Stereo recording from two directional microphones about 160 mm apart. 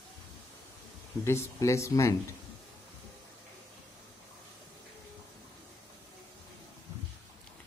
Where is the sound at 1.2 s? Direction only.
15° left (ahead or behind).